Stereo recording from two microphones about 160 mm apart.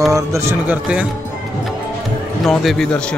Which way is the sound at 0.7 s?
10° right (ahead or behind).